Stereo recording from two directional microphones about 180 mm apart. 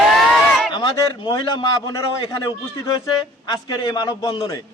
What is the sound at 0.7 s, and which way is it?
A man's voice, 25° left (ahead or behind).